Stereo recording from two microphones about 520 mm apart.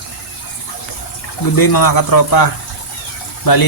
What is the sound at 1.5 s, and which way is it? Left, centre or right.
A man's voice, left.